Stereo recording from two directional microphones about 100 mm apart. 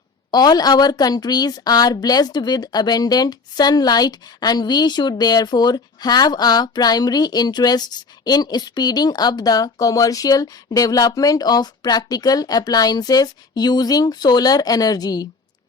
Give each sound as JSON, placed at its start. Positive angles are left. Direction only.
{"t": 0.3, "sound": "a woman's voice", "side_deg": 40}